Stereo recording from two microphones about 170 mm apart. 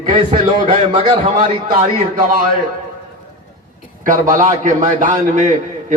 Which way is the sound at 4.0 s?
50° right (ahead or behind).